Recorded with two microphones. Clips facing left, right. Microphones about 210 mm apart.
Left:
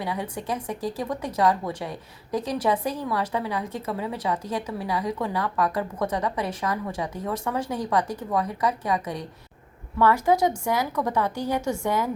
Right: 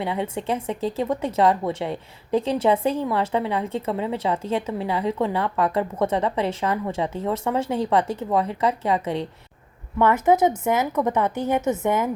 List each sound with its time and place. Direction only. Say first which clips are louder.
0.0 s a woman's voice: right 4 dB; 25° right (ahead or behind)